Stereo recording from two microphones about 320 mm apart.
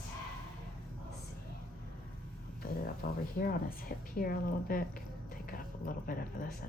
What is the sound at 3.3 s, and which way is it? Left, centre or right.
A woman's voice, left.